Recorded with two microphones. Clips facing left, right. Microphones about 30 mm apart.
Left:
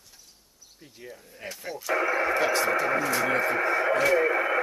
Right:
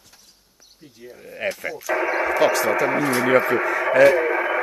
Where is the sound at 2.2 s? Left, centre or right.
Right.